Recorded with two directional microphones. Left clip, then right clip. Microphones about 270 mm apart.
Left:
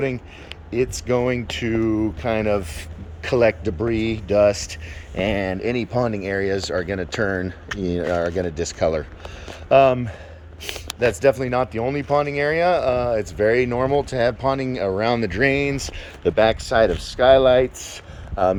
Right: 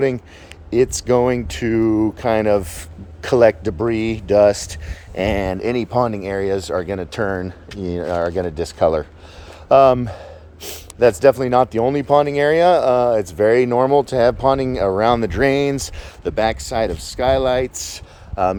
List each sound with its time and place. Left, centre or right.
0.7 s speech: right
4.5 s speech: right
5.1 s speech: centre
17.9 s a sound: centre